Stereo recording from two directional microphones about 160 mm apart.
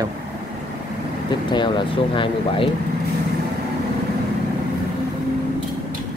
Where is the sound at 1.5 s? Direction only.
30° left (ahead or behind).